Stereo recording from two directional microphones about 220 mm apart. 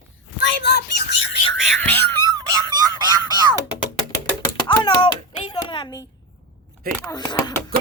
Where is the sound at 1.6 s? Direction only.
5° left (ahead or behind).